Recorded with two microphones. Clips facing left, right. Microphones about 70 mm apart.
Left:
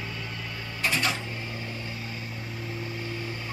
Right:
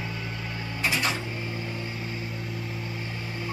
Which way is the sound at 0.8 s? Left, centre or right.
Centre.